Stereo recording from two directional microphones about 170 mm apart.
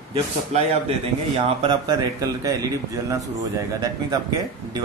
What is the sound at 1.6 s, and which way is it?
Speech, 25° right (ahead or behind).